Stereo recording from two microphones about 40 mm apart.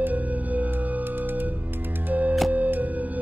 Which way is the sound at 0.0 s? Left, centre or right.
Right.